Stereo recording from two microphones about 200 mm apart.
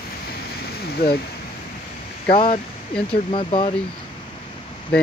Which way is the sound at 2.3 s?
25° left (ahead or behind).